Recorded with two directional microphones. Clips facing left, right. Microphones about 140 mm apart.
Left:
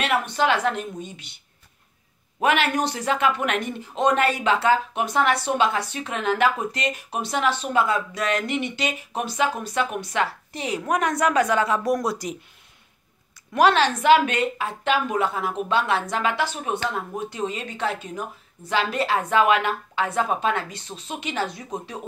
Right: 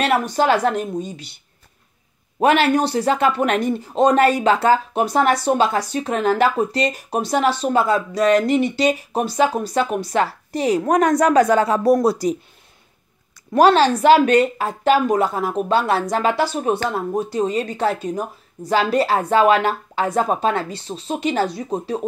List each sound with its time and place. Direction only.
0.0 s speech: 40° right (ahead or behind)
2.4 s speech: 35° right (ahead or behind)
13.5 s speech: 35° right (ahead or behind)